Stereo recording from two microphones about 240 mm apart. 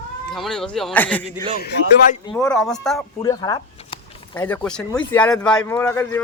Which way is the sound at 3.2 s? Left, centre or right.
Centre.